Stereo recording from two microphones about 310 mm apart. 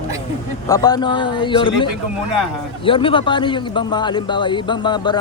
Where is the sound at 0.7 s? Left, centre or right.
Centre.